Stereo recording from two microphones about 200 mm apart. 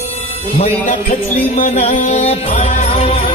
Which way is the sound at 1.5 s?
35° left (ahead or behind).